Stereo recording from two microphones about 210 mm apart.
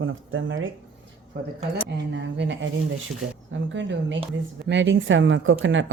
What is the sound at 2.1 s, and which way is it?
Speech, 60° right (ahead or behind).